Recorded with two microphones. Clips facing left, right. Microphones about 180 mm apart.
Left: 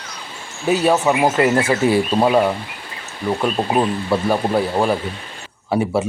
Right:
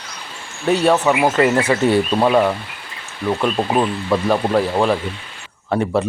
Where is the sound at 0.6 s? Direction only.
5° left (ahead or behind).